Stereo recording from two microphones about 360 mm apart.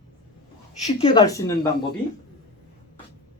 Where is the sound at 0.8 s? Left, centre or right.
Centre.